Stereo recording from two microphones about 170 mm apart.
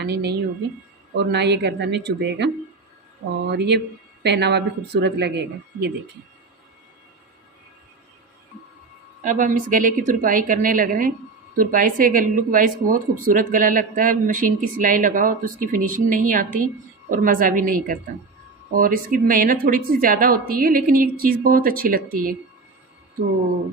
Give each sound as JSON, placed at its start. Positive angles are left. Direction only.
{"t": 0.0, "sound": "a woman's voice", "side_deg": -85}
{"t": 3.5, "sound": "a woman's voice", "side_deg": -80}
{"t": 9.2, "sound": "a woman's voice", "side_deg": -50}